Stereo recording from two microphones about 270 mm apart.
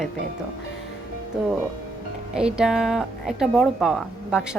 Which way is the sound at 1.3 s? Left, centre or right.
Centre.